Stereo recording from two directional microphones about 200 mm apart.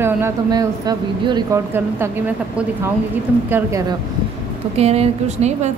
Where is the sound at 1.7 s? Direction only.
10° right (ahead or behind).